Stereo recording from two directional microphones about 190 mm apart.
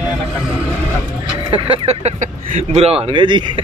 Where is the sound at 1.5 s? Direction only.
30° right (ahead or behind).